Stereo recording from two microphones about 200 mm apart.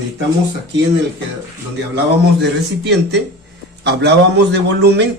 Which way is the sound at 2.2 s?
60° right (ahead or behind).